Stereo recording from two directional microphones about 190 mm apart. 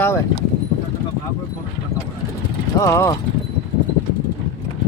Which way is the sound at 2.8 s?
15° left (ahead or behind).